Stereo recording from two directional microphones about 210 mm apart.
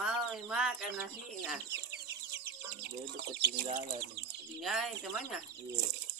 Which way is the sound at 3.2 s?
55° right (ahead or behind).